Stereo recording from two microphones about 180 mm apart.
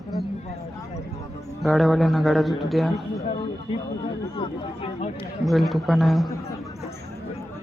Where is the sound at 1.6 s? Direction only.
Centre (ahead or behind).